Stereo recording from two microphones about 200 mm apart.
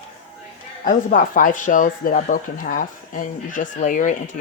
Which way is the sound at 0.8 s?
45° left (ahead or behind).